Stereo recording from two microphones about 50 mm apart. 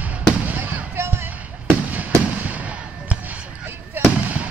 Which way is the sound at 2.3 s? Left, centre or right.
Right.